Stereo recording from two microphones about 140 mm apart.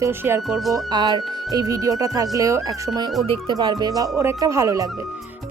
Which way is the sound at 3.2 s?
35° right (ahead or behind).